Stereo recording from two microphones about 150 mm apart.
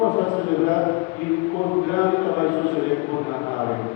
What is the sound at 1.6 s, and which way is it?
Chant, 35° left (ahead or behind).